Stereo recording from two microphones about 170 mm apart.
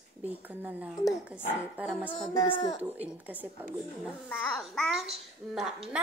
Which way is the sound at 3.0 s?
10° right (ahead or behind).